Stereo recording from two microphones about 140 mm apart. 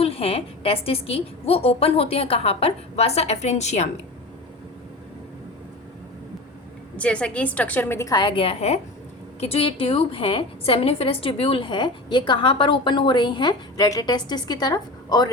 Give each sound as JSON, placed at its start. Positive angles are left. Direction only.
{"t": 0.0, "sound": "a woman's voice", "side_deg": 45}
{"t": 6.9, "sound": "a woman's voice", "side_deg": 10}